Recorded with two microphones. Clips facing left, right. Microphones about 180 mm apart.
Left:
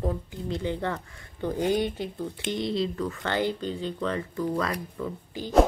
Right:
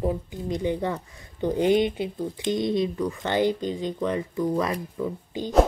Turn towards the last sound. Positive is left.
turn(degrees=-15)  # may be behind; listen again after turning